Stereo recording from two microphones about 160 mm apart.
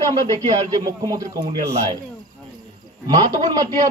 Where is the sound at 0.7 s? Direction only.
25° right (ahead or behind).